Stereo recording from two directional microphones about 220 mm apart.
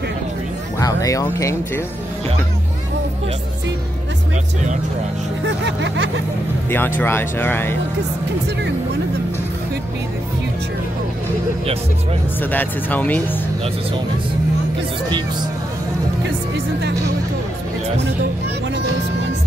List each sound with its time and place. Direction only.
0.7 s speech: 15° left (ahead or behind)
5.7 s vehicle: 55° right (ahead or behind)
7.0 s speech: 10° left (ahead or behind)
12.4 s speech: 10° left (ahead or behind)